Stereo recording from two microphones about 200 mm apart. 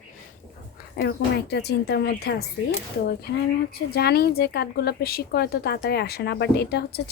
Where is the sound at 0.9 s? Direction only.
55° left (ahead or behind).